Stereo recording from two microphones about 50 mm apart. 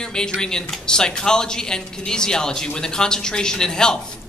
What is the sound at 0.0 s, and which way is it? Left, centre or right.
Speech, centre.